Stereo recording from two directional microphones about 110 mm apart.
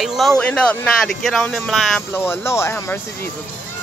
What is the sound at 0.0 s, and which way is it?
Speech, centre (ahead or behind).